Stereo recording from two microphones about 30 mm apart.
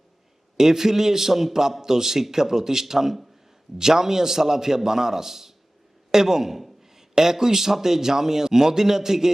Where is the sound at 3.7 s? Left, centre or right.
Centre.